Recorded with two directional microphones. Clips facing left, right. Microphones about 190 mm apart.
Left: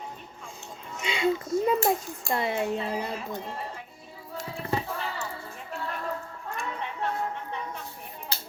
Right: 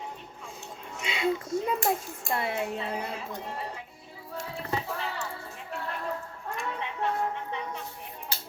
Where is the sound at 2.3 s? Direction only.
Centre (ahead or behind).